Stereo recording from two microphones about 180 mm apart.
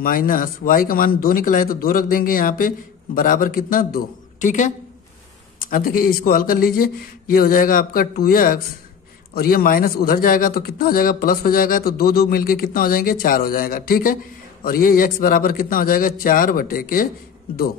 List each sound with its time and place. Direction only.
0.0 s a man's voice: 50° left (ahead or behind)